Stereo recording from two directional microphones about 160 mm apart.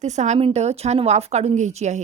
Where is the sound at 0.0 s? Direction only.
45° right (ahead or behind).